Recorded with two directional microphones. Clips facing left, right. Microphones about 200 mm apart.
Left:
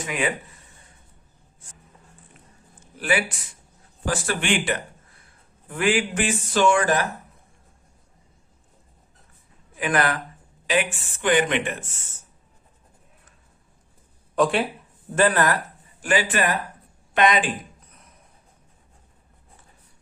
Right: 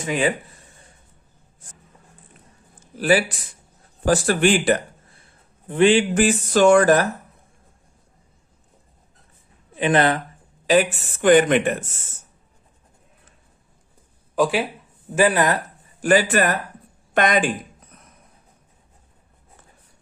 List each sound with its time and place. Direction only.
0.0 s speech: 30° right (ahead or behind)
3.0 s speech: 35° right (ahead or behind)
5.6 s speech: 25° right (ahead or behind)
6.1 s speech: 40° right (ahead or behind)
9.7 s speech: 25° right (ahead or behind)
10.7 s speech: 40° right (ahead or behind)
14.3 s speech: centre (ahead or behind)
16.0 s speech: 45° right (ahead or behind)